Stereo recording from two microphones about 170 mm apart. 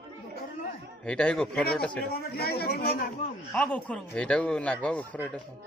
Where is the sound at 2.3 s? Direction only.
65° left (ahead or behind).